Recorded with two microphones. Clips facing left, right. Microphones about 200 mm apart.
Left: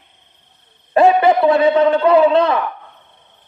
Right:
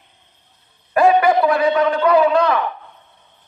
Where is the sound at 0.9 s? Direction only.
25° left (ahead or behind).